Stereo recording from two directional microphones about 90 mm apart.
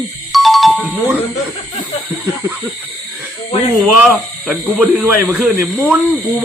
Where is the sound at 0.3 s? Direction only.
Centre (ahead or behind).